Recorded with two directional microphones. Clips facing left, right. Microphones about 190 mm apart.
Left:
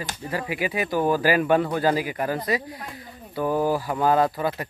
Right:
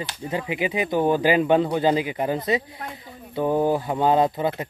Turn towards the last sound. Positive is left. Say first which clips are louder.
# right 1 dB
turn(degrees=-20)  # may be behind; listen again after turning